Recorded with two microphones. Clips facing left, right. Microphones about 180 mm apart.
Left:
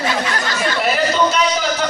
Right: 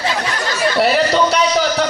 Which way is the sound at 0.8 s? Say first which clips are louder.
Right 3 dB; 70° right (ahead or behind).